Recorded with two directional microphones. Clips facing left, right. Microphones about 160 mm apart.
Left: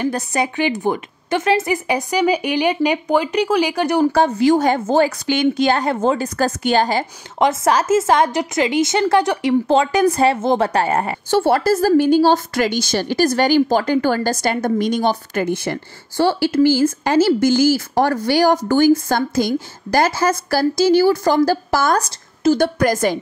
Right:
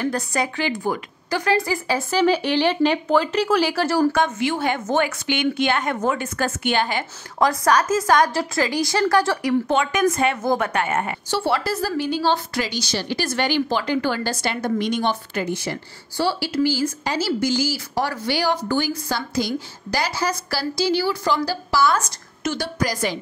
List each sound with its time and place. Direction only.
0.0 s a woman's voice: 20° left (ahead or behind)
4.1 s a woman's voice: 35° left (ahead or behind)
7.3 s a woman's voice: 25° left (ahead or behind)
11.2 s speech: 45° left (ahead or behind)
22.6 s speech: 50° left (ahead or behind)